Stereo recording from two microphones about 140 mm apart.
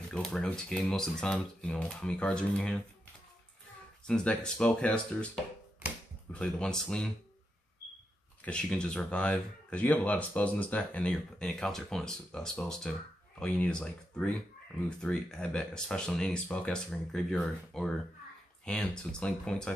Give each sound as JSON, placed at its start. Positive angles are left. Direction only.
{"t": 0.1, "sound": "speech", "side_deg": 5}
{"t": 4.1, "sound": "speech", "side_deg": 5}
{"t": 8.4, "sound": "speech", "side_deg": 10}